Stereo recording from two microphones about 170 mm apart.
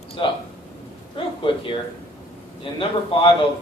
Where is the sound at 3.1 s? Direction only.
30° left (ahead or behind).